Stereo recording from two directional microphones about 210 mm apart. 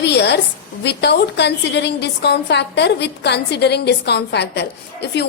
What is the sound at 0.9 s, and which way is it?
A woman's voice, 55° left (ahead or behind).